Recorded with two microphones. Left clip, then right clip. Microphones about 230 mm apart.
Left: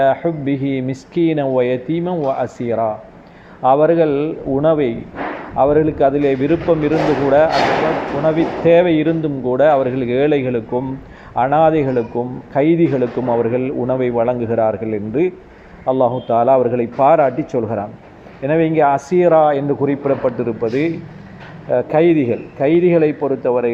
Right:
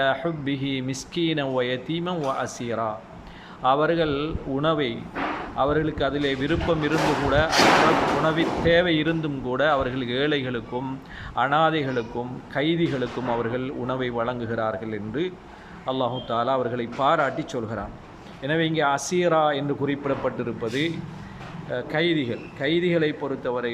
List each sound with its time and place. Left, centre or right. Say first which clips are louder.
0.0 s a man's voice: left 9 dB; centre